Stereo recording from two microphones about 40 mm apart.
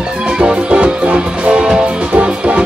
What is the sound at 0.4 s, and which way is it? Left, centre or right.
Music, right.